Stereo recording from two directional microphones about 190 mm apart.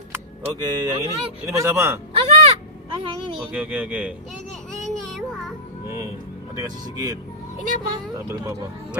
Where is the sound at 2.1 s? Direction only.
30° right (ahead or behind).